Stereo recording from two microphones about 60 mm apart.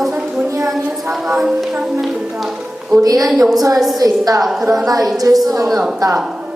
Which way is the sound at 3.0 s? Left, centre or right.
Right.